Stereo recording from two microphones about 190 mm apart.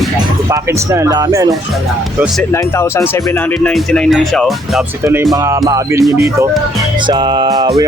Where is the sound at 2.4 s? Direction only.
15° left (ahead or behind).